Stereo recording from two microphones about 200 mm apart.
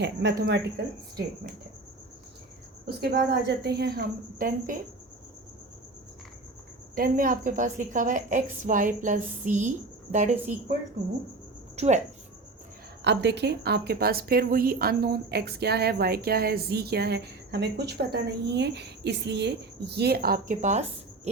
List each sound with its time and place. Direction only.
0.0 s cricket: 60° right (ahead or behind)
2.8 s a woman's voice: 50° right (ahead or behind)
6.9 s a woman's voice: 45° right (ahead or behind)
11.8 s a woman's voice: 35° right (ahead or behind)
13.1 s a woman's voice: 55° right (ahead or behind); by 20.8 s 35° right (ahead or behind)